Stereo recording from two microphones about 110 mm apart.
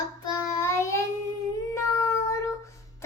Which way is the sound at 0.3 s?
25° left (ahead or behind).